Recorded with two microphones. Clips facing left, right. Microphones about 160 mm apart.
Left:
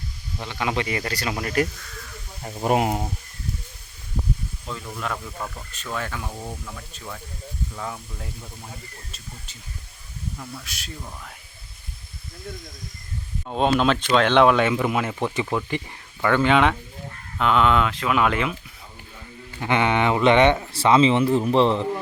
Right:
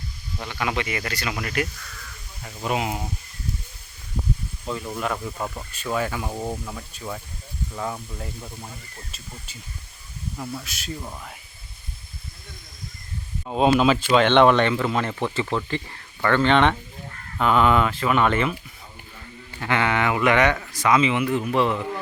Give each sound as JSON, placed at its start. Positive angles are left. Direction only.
{"t": 0.4, "sound": "speech", "side_deg": 25}
{"t": 4.9, "sound": "speech", "side_deg": -10}
{"t": 6.3, "sound": "speech", "side_deg": -20}
{"t": 10.3, "sound": "speech", "side_deg": -15}
{"t": 10.6, "sound": "speech", "side_deg": 0}
{"t": 13.5, "sound": "speech", "side_deg": -5}
{"t": 19.5, "sound": "speech", "side_deg": 20}